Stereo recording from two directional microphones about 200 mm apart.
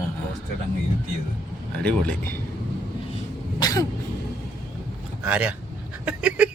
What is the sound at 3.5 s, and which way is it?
Cough, 20° left (ahead or behind).